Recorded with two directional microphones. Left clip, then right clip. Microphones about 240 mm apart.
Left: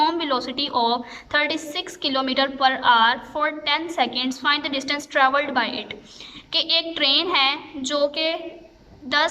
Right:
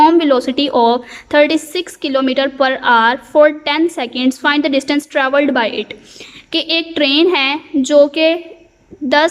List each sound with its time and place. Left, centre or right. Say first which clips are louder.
0.0 s a woman's voice: right 11 dB; right